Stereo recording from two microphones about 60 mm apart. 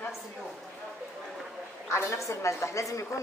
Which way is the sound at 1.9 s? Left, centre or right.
Left.